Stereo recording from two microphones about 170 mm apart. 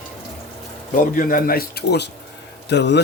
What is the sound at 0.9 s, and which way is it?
A man's voice, 50° left (ahead or behind).